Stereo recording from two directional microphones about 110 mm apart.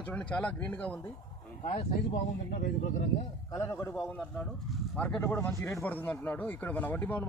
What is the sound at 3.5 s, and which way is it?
Speech, 30° left (ahead or behind).